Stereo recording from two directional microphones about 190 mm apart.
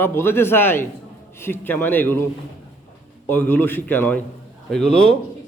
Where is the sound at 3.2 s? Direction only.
10° left (ahead or behind).